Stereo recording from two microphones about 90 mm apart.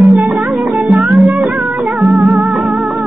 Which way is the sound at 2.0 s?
15° right (ahead or behind).